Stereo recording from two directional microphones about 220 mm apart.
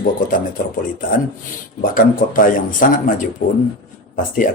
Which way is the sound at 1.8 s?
40° left (ahead or behind).